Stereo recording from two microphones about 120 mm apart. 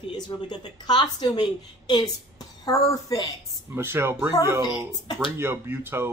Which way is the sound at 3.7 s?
20° right (ahead or behind).